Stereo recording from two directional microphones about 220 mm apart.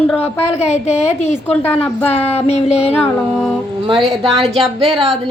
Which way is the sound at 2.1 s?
30° left (ahead or behind).